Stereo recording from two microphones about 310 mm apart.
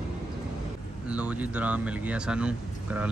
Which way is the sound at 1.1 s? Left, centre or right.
Centre.